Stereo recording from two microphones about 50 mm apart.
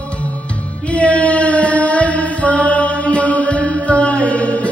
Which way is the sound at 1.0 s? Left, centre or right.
Left.